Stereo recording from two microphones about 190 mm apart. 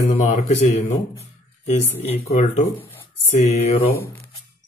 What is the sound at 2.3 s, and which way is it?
Speech, 35° left (ahead or behind).